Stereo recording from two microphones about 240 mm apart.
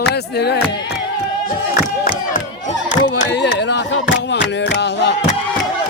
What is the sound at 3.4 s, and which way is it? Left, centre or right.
Speech, left.